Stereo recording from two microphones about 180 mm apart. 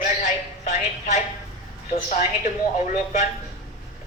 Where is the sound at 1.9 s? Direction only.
40° left (ahead or behind).